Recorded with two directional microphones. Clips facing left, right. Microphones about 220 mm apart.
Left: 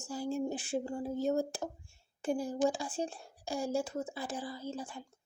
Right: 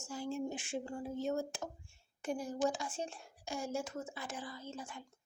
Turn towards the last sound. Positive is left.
turn(degrees=35)  # may be behind; listen again after turning